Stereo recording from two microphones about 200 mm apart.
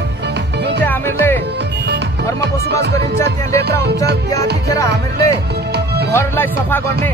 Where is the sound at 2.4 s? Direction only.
60° right (ahead or behind).